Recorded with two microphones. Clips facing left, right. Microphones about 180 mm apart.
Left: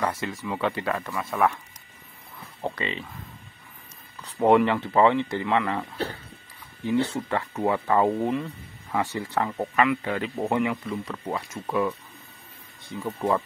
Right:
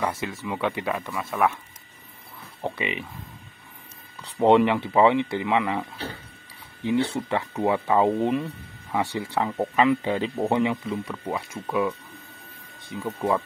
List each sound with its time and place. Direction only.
0.0 s speech: 10° right (ahead or behind)
2.7 s speech: 15° right (ahead or behind)
4.4 s speech: 15° right (ahead or behind)
9.8 s speech: 25° right (ahead or behind)
10.9 s speech: 10° right (ahead or behind)
12.9 s speech: 15° right (ahead or behind)